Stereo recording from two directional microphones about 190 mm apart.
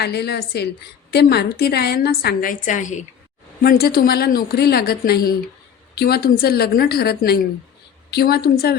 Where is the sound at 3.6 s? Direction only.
55° left (ahead or behind).